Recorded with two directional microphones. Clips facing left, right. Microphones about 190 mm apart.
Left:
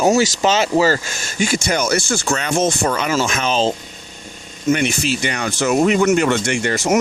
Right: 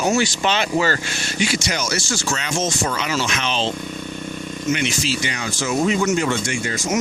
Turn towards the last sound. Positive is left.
turn(degrees=65)  # may be behind; listen again after turning